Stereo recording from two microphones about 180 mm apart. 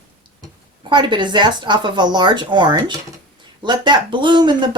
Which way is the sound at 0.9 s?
25° right (ahead or behind).